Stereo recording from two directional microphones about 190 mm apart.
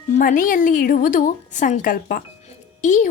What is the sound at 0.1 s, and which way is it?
A woman's voice, 45° left (ahead or behind).